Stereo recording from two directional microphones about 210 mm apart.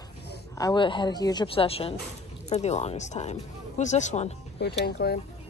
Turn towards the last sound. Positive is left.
turn(degrees=50)  # may be behind; listen again after turning